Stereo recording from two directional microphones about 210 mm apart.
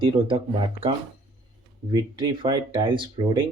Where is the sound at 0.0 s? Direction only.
25° right (ahead or behind).